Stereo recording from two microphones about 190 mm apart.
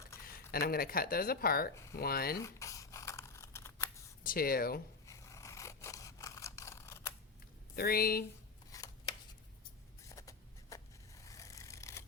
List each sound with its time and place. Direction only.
0.3 s speech: 50° left (ahead or behind)
2.4 s crumpling: 15° left (ahead or behind)
4.2 s speech: 50° left (ahead or behind)
5.0 s scissors: 15° left (ahead or behind)
7.8 s speech: 55° left (ahead or behind)
8.7 s chopping: 20° left (ahead or behind)
10.1 s a sound: 15° left (ahead or behind)